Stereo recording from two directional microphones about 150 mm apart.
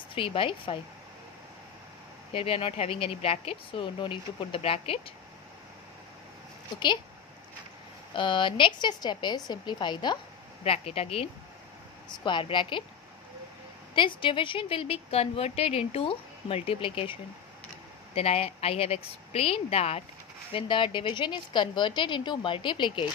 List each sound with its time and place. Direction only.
0.1 s a woman's voice: 35° left (ahead or behind)
2.3 s a woman's voice: 40° left (ahead or behind)
8.1 s a woman's voice: 35° left (ahead or behind)
10.6 s a woman's voice: 40° left (ahead or behind)
13.9 s a woman's voice: 35° left (ahead or behind)